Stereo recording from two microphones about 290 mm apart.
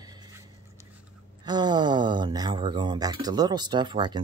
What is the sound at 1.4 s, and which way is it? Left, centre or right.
Speech, centre.